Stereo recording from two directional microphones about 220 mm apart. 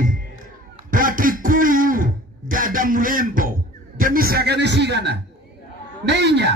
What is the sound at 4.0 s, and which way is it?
A man's voice, 40° right (ahead or behind).